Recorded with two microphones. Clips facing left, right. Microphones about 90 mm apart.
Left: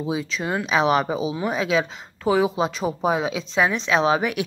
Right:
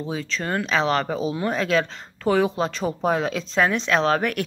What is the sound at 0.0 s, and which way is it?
Speech, 10° left (ahead or behind).